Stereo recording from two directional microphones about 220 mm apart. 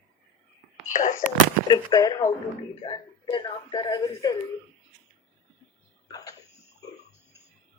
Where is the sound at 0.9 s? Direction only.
35° left (ahead or behind).